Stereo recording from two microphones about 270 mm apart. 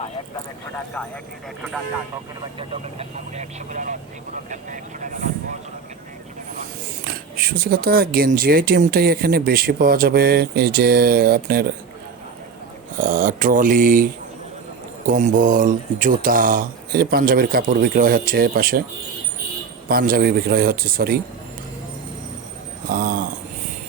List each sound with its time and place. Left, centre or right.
2.6 s speech: right
7.0 s speech: right
13.0 s speech: right
19.9 s speech: right
22.9 s speech: right